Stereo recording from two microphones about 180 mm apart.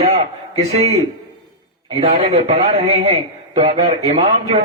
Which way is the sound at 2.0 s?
35° right (ahead or behind).